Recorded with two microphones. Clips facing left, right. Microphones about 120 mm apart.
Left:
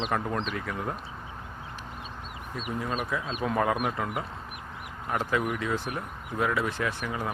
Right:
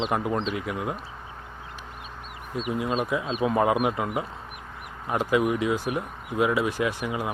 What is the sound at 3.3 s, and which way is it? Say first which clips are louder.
Speech: right 5 dB; 5° right (ahead or behind).